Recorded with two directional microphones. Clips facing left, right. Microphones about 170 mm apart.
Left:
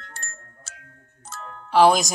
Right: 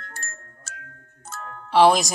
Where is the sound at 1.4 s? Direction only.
Centre (ahead or behind).